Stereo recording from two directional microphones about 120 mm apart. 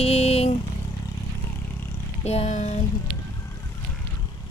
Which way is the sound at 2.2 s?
65° left (ahead or behind).